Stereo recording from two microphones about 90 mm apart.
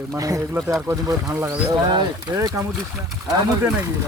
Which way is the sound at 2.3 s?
45° right (ahead or behind).